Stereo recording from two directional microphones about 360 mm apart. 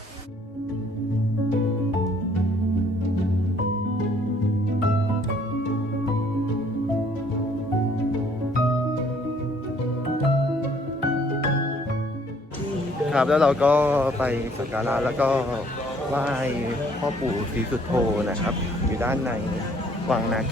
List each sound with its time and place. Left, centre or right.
13.1 s speech: centre
17.9 s speech: centre